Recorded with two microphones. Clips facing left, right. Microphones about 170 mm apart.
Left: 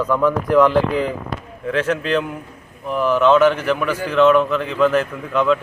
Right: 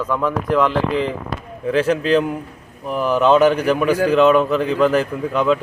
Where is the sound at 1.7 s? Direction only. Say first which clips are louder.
Right 3 dB; 35° right (ahead or behind).